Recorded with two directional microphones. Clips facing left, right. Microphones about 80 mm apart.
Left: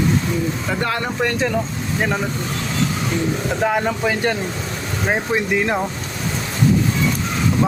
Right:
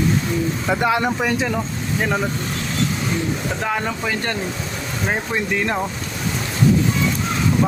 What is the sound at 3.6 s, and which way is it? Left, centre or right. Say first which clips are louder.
Speech: left 4 dB; centre.